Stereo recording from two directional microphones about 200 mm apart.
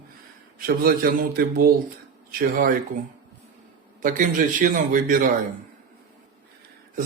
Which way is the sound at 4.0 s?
40° right (ahead or behind).